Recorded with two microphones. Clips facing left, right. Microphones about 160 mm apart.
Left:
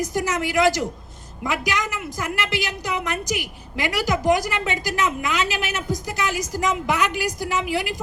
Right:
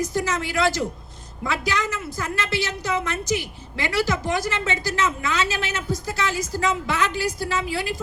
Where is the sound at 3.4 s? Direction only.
15° left (ahead or behind).